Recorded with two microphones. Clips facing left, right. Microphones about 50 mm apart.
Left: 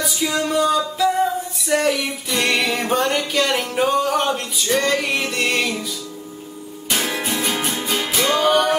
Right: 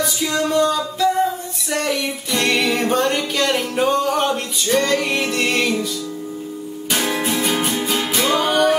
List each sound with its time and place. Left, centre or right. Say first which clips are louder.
0.0 s music: right 1 dB; centre
6.9 s music: right 2 dB; centre